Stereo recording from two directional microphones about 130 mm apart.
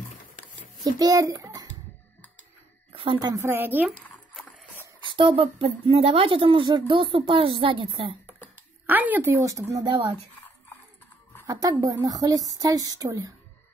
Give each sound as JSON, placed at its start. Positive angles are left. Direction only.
{"t": 0.9, "sound": "a child's voice", "side_deg": -25}
{"t": 2.9, "sound": "a sound", "side_deg": -45}
{"t": 3.2, "sound": "speech", "side_deg": -25}
{"t": 5.1, "sound": "speech", "side_deg": -45}
{"t": 8.8, "sound": "speech", "side_deg": -15}
{"t": 9.4, "sound": "speech", "side_deg": -25}
{"t": 11.4, "sound": "speech", "side_deg": -25}